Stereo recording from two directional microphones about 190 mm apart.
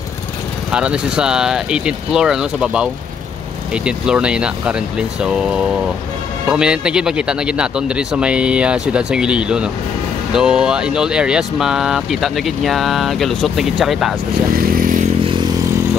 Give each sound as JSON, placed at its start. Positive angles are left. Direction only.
{"t": 0.7, "sound": "speech", "side_deg": -5}
{"t": 14.5, "sound": "vehicle", "side_deg": -50}
{"t": 15.2, "sound": "vehicle", "side_deg": -25}